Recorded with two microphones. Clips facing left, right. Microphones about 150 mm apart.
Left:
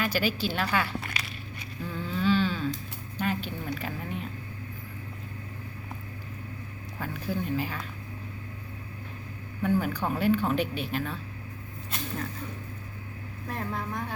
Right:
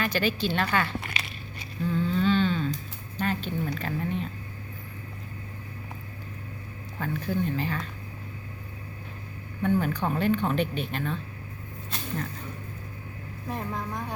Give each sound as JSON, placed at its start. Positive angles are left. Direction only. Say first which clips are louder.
{"t": 0.0, "sound": "speech", "louder": "right 1 dB", "side_deg": 5}
{"t": 1.9, "sound": "a sound", "louder": "right 2 dB", "side_deg": 5}
{"t": 3.2, "sound": "speech", "louder": "right 2 dB", "side_deg": 10}
{"t": 7.0, "sound": "speech", "louder": "right 4 dB", "side_deg": 5}
{"t": 9.6, "sound": "speech", "louder": "right 1 dB", "side_deg": 5}
{"t": 13.5, "sound": "a woman's voice", "louder": "right 1 dB", "side_deg": -15}